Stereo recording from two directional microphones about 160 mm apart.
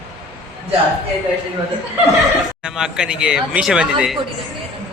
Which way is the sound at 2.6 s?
5° right (ahead or behind).